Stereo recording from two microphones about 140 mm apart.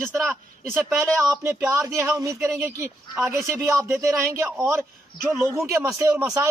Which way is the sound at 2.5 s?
10° right (ahead or behind).